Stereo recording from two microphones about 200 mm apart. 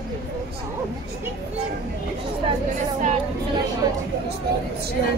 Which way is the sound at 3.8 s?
20° right (ahead or behind).